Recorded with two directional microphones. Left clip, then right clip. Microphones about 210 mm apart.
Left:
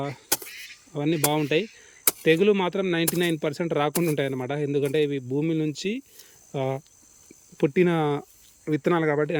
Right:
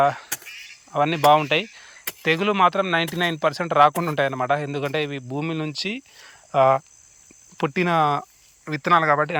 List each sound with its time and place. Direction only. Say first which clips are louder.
0.3 s vehicle: left 3 dB; 60° left (ahead or behind)
0.9 s speech: right 9 dB; 5° left (ahead or behind)